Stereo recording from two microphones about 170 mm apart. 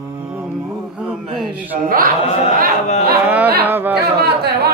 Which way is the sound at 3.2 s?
10° right (ahead or behind).